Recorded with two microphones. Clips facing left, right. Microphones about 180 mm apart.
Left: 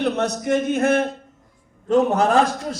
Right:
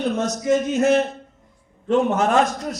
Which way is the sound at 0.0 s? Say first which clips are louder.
Left 1 dB; 65° left (ahead or behind).